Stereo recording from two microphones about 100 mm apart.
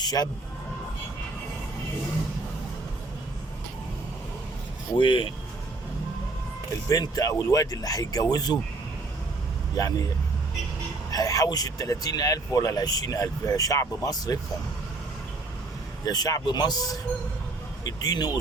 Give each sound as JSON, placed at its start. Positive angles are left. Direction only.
{"t": 0.0, "sound": "speech", "side_deg": 40}
{"t": 4.9, "sound": "speech", "side_deg": 55}
{"t": 6.8, "sound": "speech", "side_deg": 35}
{"t": 9.7, "sound": "speech", "side_deg": 35}
{"t": 11.1, "sound": "speech", "side_deg": 35}
{"t": 16.0, "sound": "speech", "side_deg": 40}